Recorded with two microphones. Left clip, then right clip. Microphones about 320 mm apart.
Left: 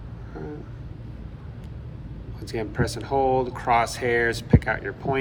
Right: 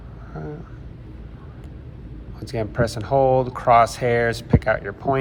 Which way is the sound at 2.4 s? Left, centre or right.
Centre.